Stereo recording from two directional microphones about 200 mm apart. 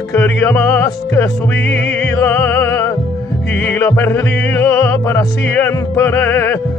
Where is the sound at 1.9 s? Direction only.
5° left (ahead or behind).